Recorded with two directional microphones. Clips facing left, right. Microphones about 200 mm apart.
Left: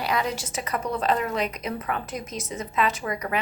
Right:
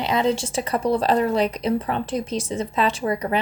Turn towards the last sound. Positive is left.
turn(degrees=-30)  # may be behind; listen again after turning